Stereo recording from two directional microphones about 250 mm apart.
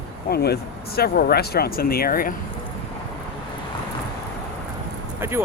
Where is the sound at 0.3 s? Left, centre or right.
Left.